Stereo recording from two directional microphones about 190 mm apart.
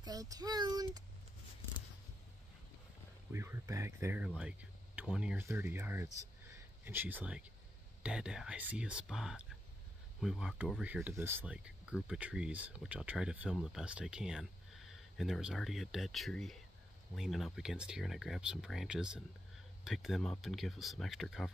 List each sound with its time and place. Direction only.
0.0 s speech: 20° right (ahead or behind)
3.3 s speech: 15° right (ahead or behind)
4.4 s a sound: 5° right (ahead or behind)
5.0 s speech: 5° right (ahead or behind)